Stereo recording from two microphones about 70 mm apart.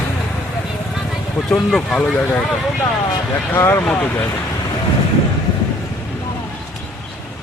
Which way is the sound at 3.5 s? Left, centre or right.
Left.